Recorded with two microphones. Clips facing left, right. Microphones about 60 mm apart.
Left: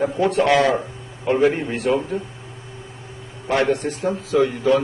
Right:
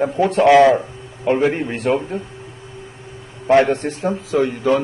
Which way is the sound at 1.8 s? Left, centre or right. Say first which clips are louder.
Right 1 dB; right.